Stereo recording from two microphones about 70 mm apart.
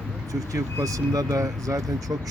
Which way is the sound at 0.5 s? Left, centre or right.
Right.